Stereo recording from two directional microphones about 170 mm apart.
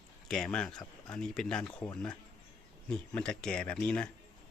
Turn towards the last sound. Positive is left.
turn(degrees=5)  # may be behind; listen again after turning